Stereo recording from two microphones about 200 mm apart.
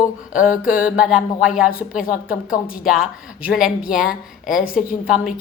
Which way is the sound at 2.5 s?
45° left (ahead or behind).